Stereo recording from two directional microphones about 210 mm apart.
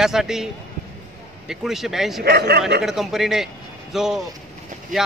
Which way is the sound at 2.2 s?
50° right (ahead or behind).